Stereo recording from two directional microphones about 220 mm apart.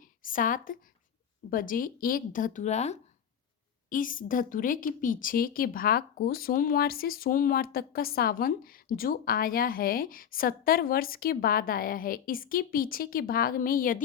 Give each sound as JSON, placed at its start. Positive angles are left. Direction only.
{"t": 0.2, "sound": "a woman's voice", "side_deg": 40}